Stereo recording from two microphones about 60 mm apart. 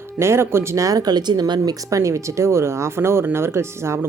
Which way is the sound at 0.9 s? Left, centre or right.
Right.